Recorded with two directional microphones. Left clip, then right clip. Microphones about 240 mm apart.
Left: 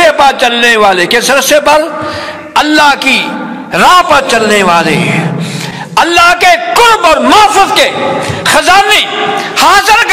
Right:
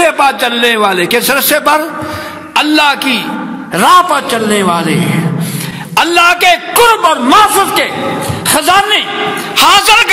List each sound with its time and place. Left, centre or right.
0.0 s a man's voice: right
9.6 s a man's voice: right